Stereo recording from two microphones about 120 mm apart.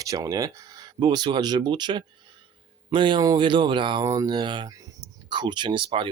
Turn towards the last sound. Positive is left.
turn(degrees=-45)  # may be behind; listen again after turning